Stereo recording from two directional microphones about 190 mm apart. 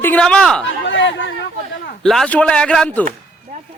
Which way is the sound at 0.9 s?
70° left (ahead or behind).